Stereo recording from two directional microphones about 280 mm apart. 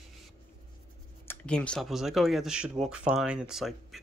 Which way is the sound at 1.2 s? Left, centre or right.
Centre.